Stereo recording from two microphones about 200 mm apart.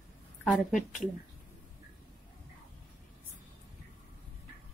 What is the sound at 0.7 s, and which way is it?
Speech, 40° left (ahead or behind).